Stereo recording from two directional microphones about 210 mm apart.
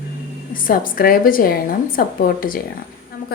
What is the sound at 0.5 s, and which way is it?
A woman's voice, 40° left (ahead or behind).